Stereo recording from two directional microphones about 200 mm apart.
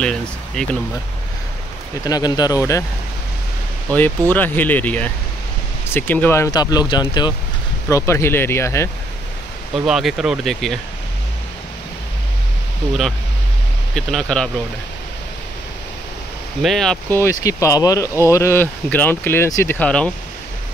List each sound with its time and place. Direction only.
0.0 s a sound: 5° left (ahead or behind)
2.0 s speech: 20° left (ahead or behind)
4.3 s speech: 10° left (ahead or behind)
9.8 s speech: centre (ahead or behind)
13.9 s speech: 5° left (ahead or behind)
16.6 s speech: centre (ahead or behind)